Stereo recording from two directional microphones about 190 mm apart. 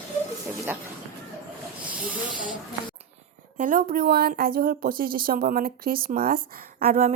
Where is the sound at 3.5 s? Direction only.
45° right (ahead or behind).